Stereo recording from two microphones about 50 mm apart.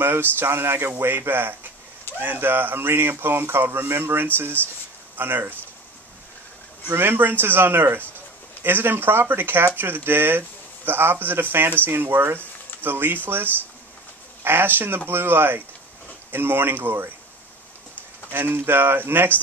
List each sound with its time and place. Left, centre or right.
0.0 s speech: right
6.9 s speech: right
18.3 s speech: right